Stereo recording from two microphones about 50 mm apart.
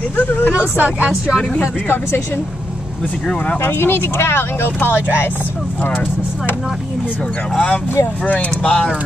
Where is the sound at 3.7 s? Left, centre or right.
Left.